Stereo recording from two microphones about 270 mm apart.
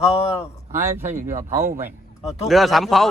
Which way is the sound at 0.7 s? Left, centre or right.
Centre.